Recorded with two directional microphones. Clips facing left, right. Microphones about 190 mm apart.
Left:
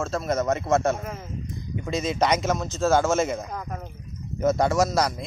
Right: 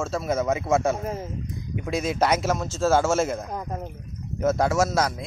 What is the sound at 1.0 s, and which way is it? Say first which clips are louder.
Speech: right 5 dB; 30° right (ahead or behind).